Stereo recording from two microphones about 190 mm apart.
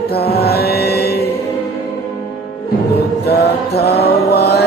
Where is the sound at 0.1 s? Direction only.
55° left (ahead or behind).